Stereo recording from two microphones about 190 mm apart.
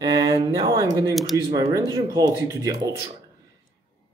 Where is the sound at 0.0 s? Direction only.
20° right (ahead or behind).